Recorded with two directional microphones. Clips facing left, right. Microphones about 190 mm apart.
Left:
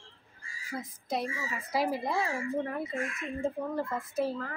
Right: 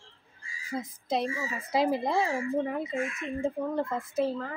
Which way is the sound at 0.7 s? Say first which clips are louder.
Right 4 dB; 20° right (ahead or behind).